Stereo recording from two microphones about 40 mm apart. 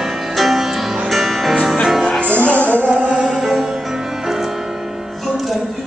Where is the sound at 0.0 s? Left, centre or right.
Centre.